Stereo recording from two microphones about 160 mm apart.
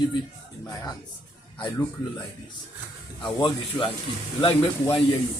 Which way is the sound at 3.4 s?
30° left (ahead or behind).